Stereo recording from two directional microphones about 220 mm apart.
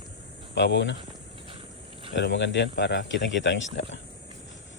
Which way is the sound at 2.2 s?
55° left (ahead or behind).